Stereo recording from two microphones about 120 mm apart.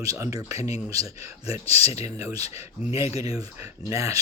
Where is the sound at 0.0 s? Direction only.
25° right (ahead or behind).